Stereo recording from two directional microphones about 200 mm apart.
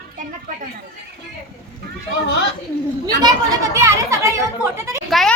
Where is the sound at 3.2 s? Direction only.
15° right (ahead or behind).